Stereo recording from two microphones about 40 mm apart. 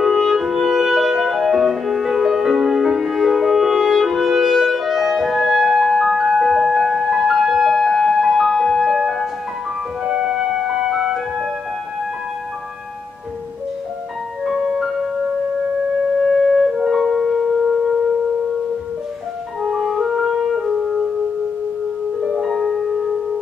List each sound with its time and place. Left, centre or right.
0.0 s music: centre
10.0 s music: centre
14.4 s music: centre
16.2 s music: centre
19.9 s music: centre
22.5 s music: centre